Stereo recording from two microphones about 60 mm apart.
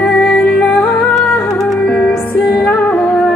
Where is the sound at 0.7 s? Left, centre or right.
Centre.